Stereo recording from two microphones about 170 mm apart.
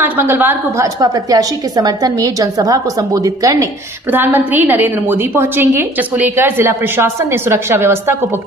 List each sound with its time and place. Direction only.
0.0 s a woman's voice: 10° right (ahead or behind)
1.0 s a woman's voice: 25° right (ahead or behind)